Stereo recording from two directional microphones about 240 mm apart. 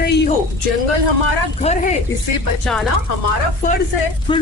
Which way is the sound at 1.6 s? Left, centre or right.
Left.